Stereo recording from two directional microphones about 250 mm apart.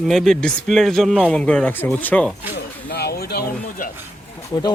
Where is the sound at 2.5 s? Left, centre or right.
Left.